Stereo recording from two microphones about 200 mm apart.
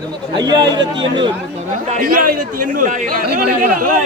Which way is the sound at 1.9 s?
45° right (ahead or behind).